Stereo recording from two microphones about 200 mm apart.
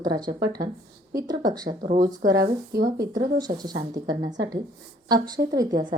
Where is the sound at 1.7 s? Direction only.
40° right (ahead or behind).